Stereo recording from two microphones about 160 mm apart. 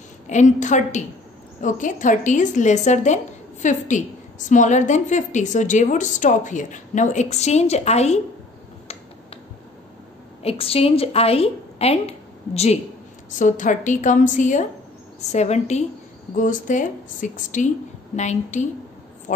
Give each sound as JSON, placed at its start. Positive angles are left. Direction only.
{"t": 0.3, "sound": "a woman's voice", "side_deg": 50}
{"t": 10.4, "sound": "a woman's voice", "side_deg": 40}
{"t": 13.3, "sound": "a woman's voice", "side_deg": 55}
{"t": 16.3, "sound": "a woman's voice", "side_deg": 55}